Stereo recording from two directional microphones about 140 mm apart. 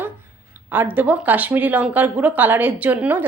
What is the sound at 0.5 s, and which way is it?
Speech, 10° right (ahead or behind).